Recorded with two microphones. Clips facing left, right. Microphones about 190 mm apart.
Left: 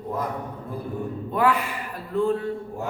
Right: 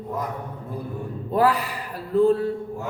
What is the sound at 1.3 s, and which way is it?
Speech, 35° right (ahead or behind).